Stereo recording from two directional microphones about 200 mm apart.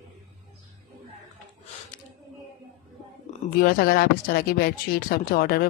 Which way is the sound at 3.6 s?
45° left (ahead or behind).